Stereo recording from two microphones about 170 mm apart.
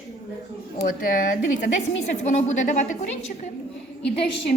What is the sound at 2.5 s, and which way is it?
Speech, 45° left (ahead or behind).